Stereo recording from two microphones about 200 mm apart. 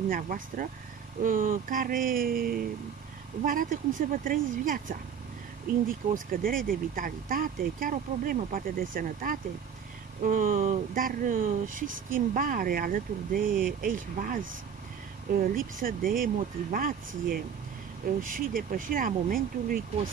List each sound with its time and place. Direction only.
0.1 s speech: 45° right (ahead or behind)
18.0 s speech: 45° right (ahead or behind)